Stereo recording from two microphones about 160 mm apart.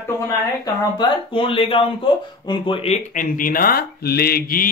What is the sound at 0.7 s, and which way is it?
Speech, 30° left (ahead or behind).